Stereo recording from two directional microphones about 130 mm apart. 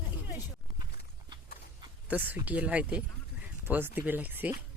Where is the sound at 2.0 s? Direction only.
10° right (ahead or behind).